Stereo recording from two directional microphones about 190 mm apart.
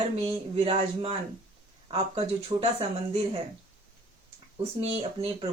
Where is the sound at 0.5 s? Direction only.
30° right (ahead or behind).